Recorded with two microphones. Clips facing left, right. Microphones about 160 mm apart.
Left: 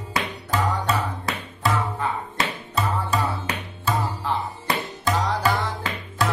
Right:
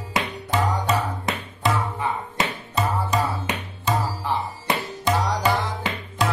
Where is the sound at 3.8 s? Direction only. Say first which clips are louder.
Right 1 dB; 20° right (ahead or behind).